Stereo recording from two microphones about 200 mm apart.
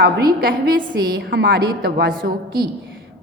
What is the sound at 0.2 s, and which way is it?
A woman's voice, 50° right (ahead or behind).